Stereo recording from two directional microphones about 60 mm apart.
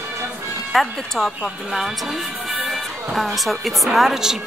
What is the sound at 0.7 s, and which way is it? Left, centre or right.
Speech, centre.